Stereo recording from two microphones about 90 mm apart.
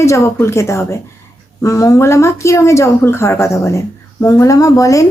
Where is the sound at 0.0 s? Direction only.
35° left (ahead or behind).